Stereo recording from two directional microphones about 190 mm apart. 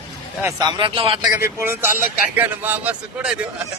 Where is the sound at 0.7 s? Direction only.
25° right (ahead or behind).